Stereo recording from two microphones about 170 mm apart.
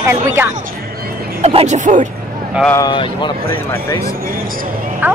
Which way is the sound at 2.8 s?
25° left (ahead or behind).